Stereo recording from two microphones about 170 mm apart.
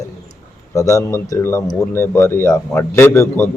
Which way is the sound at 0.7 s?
20° left (ahead or behind).